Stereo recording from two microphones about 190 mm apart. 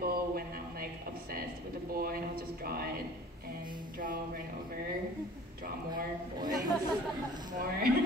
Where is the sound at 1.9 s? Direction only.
50° right (ahead or behind).